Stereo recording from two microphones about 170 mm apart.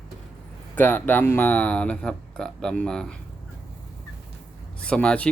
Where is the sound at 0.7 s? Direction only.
10° left (ahead or behind).